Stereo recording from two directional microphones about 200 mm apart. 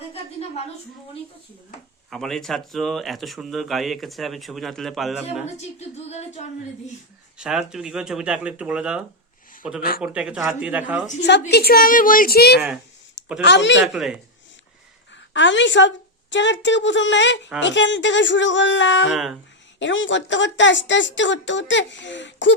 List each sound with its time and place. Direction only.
2.0 s speech: centre (ahead or behind)
5.5 s a sound: 35° left (ahead or behind)
7.3 s speech: 5° right (ahead or behind)
11.2 s a woman's voice: 60° left (ahead or behind)
13.4 s a woman's voice: 60° left (ahead or behind)
13.9 s speech: centre (ahead or behind)
15.3 s a woman's voice: 65° left (ahead or behind)
19.1 s speech: centre (ahead or behind)
19.8 s a woman's voice: 65° left (ahead or behind)